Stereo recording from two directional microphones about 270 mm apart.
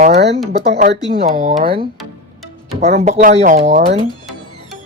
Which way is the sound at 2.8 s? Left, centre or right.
Right.